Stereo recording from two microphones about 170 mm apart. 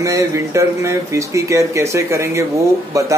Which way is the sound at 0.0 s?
20° right (ahead or behind).